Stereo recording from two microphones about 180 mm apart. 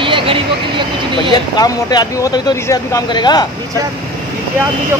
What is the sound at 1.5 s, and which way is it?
Speech, 20° left (ahead or behind).